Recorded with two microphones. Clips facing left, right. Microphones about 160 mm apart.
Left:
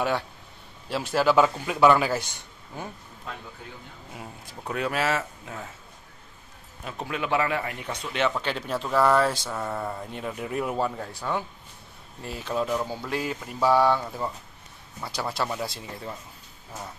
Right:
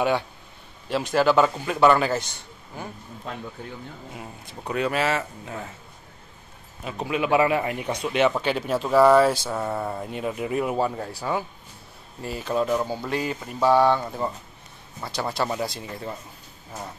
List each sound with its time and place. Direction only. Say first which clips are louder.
0.8 s speech: right 2 dB; 5° left (ahead or behind)
4.1 s speech: right 2 dB; centre (ahead or behind)
6.8 s a man's voice: right 5 dB; 5° right (ahead or behind)
14.0 s a man's voice: right 3 dB; 5° right (ahead or behind)
15.0 s speech: right 3 dB; 5° left (ahead or behind)